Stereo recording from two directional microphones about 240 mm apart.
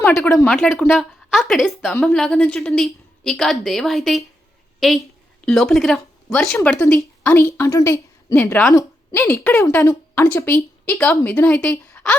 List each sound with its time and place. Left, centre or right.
0.0 s a woman's voice: centre
5.5 s speech: centre